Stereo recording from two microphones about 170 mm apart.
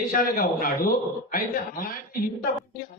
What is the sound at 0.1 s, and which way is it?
Speech, 55° left (ahead or behind).